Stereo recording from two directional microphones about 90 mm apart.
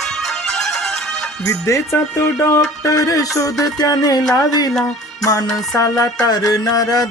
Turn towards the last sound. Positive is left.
turn(degrees=45)  # may be behind; listen again after turning